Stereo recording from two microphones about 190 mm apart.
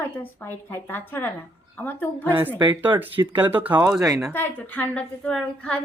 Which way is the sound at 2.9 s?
25° right (ahead or behind).